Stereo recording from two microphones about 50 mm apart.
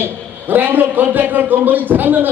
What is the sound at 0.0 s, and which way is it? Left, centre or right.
A man's voice, right.